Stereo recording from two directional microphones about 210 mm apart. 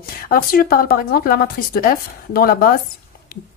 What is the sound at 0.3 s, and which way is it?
A woman's voice, 45° left (ahead or behind).